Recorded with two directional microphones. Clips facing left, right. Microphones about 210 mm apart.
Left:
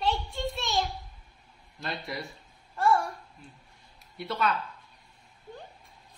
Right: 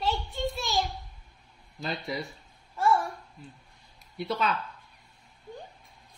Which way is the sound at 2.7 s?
Centre (ahead or behind).